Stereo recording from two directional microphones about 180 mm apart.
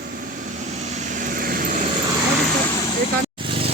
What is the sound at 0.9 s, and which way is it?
Vehicle, 45° right (ahead or behind).